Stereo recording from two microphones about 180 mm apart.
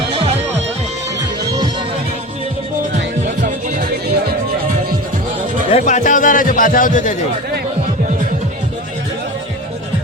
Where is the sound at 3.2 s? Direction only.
45° right (ahead or behind).